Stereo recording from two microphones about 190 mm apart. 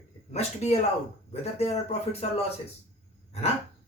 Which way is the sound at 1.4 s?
35° left (ahead or behind).